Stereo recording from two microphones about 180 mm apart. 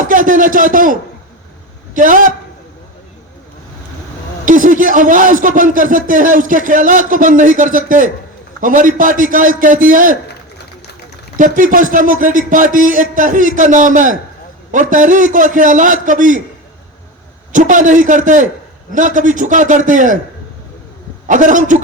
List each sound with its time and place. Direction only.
0.0 s speech: 45° right (ahead or behind)
2.0 s speech: 50° right (ahead or behind)
4.4 s speech: 45° right (ahead or behind)
11.3 s speech: 50° right (ahead or behind)
17.5 s speech: 45° right (ahead or behind)
21.2 s speech: 45° right (ahead or behind)